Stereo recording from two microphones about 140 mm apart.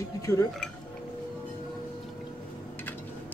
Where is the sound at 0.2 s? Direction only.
25° left (ahead or behind).